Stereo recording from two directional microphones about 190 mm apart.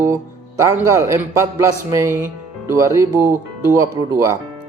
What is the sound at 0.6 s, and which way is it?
Speech, 15° right (ahead or behind).